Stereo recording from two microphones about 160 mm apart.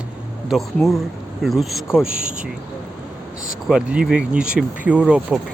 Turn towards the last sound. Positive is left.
turn(degrees=-5)  # may be behind; listen again after turning